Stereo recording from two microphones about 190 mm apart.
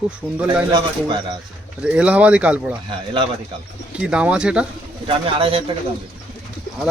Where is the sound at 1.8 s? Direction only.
5° right (ahead or behind).